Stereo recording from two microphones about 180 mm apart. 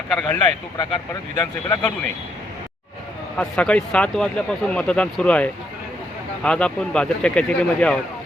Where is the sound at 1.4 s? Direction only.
10° left (ahead or behind).